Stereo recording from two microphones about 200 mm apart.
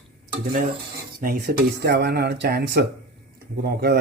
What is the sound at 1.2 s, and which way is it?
Speech, 50° right (ahead or behind).